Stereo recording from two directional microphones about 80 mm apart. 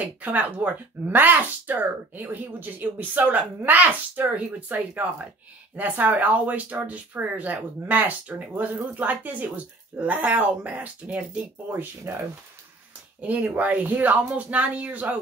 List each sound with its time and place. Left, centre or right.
0.0 s speech: centre
11.7 s speech: right
13.2 s speech: centre